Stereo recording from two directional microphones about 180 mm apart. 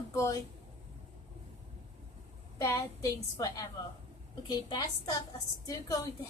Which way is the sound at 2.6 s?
15° left (ahead or behind).